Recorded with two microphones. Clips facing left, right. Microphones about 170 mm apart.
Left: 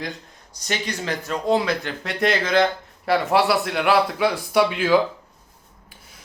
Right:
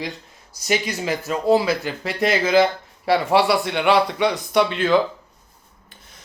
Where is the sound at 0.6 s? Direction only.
10° right (ahead or behind); by 4.9 s 10° left (ahead or behind).